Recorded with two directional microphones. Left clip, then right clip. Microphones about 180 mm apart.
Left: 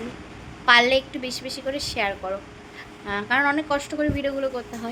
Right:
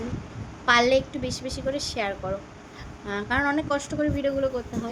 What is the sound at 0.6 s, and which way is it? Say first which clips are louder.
Speech: left 3 dB; 15° right (ahead or behind).